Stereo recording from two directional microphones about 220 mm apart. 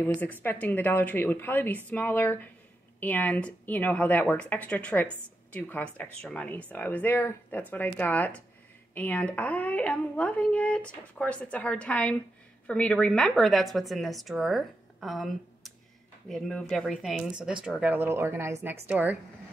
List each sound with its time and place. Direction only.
0.0 s speech: 10° left (ahead or behind); by 19.1 s 5° right (ahead or behind)